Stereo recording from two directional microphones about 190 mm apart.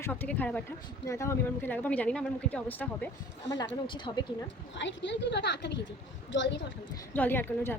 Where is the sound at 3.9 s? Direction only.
25° left (ahead or behind).